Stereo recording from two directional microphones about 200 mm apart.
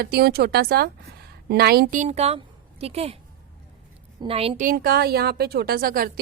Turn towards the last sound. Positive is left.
turn(degrees=-45)  # may be behind; listen again after turning